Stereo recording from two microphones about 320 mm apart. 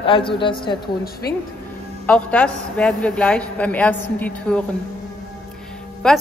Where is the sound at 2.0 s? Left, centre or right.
Centre.